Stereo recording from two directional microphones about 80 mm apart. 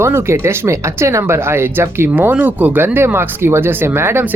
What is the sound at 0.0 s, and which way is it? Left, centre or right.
Speech, right.